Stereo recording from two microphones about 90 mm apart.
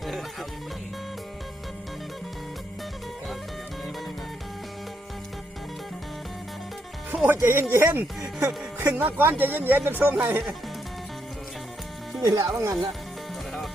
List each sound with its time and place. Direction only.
0.0 s music: centre (ahead or behind)
7.3 s speech: 30° right (ahead or behind)
9.0 s speech: 20° right (ahead or behind)
12.2 s speech: 45° right (ahead or behind)